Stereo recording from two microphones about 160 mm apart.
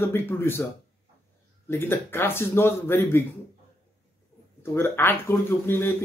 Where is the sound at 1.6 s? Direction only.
15° left (ahead or behind).